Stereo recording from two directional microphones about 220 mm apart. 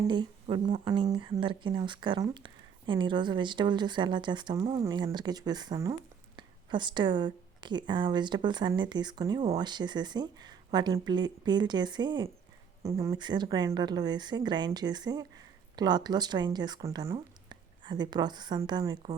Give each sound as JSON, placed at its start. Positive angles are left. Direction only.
{"t": 0.0, "sound": "speech", "side_deg": -20}